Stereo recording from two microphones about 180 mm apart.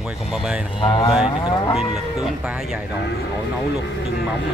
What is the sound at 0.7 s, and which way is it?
Moo, 25° left (ahead or behind).